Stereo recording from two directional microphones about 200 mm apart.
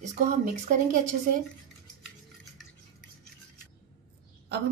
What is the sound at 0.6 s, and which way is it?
Speech, 40° right (ahead or behind).